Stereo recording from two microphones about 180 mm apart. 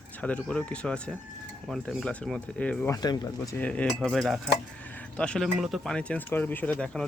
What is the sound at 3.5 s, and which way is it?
Speech, 5° left (ahead or behind).